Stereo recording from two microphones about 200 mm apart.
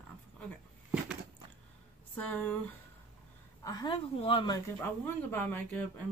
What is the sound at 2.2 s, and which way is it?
Speech, 5° left (ahead or behind).